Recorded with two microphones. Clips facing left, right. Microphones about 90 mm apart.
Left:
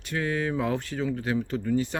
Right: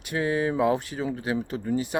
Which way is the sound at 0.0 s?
15° right (ahead or behind).